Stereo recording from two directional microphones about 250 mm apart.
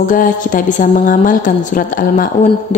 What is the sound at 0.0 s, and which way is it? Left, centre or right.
Speech, left.